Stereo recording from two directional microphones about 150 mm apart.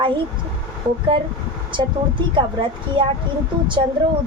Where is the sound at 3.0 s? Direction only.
35° right (ahead or behind).